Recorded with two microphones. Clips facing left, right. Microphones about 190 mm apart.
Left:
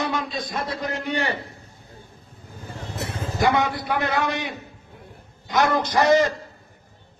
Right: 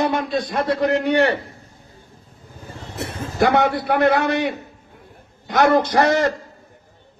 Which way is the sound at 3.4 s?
60° right (ahead or behind).